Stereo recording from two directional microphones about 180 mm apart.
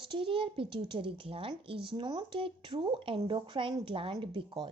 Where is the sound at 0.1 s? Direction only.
30° right (ahead or behind).